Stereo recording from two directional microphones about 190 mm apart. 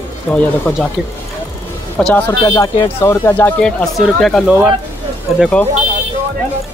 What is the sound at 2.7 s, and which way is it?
Speech, 25° left (ahead or behind).